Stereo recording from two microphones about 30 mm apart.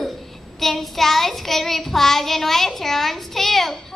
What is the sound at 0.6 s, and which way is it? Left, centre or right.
Child singing, centre.